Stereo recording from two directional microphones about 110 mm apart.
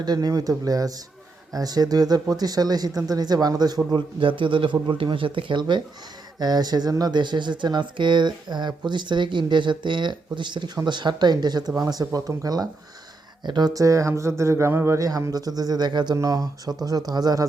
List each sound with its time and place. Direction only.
0.0 s speech: 35° right (ahead or behind)
3.9 s speech: 50° right (ahead or behind)